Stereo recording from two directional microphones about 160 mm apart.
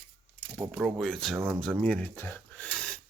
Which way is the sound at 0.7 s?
Centre (ahead or behind).